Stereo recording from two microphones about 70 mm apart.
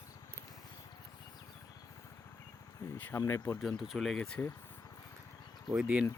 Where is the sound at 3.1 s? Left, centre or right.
Left.